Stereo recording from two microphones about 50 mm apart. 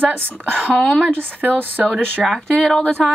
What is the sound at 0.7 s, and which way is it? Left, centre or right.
Speech, left.